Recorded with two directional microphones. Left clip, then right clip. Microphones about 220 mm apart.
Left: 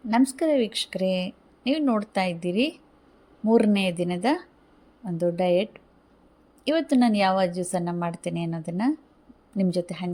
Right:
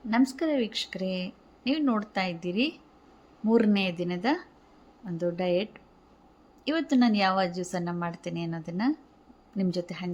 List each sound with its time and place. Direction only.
0.1 s speech: 15° left (ahead or behind)